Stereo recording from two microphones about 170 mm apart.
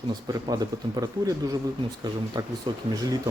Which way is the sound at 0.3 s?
20° right (ahead or behind).